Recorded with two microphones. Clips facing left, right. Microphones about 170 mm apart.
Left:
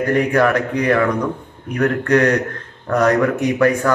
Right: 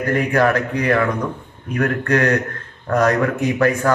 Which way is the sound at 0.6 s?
10° left (ahead or behind).